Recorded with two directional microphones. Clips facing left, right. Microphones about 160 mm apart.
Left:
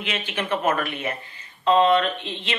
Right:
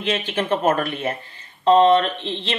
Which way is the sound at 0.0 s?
35° right (ahead or behind).